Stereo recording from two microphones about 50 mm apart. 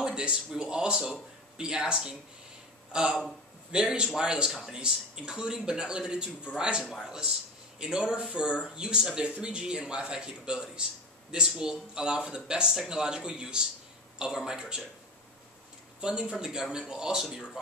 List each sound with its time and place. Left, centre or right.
0.0 s a sound: centre
0.6 s speech: centre
16.0 s speech: centre